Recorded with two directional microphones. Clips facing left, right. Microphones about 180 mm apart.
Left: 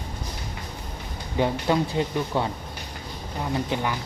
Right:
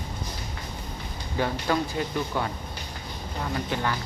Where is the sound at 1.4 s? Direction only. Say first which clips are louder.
Left 3 dB; 20° left (ahead or behind).